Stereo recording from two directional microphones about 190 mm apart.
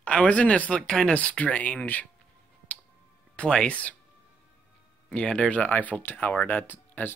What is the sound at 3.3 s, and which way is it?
Speech, 5° left (ahead or behind).